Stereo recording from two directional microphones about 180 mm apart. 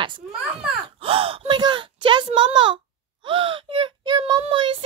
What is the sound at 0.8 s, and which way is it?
Gasp, 30° right (ahead or behind).